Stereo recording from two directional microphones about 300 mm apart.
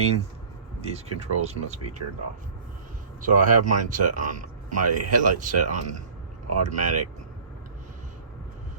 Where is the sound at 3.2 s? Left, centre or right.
Right.